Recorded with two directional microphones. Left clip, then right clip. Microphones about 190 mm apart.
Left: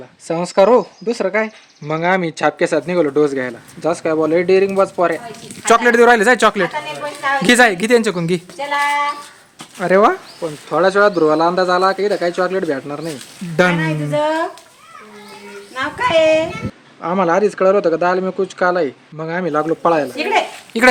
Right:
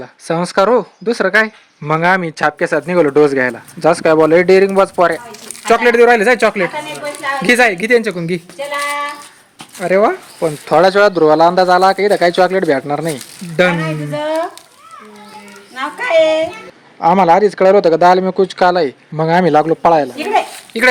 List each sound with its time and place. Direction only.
0.0 s speech: 25° right (ahead or behind)
5.6 s a woman's voice: 20° left (ahead or behind)
10.4 s speech: 35° right (ahead or behind)
13.6 s a woman's voice: 15° left (ahead or behind)
15.7 s a woman's voice: 15° left (ahead or behind)
17.0 s speech: 25° right (ahead or behind)
20.7 s a woman's voice: 25° left (ahead or behind)